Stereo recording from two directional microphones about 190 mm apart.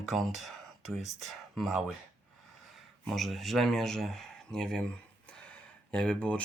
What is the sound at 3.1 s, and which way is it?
Speech, centre (ahead or behind).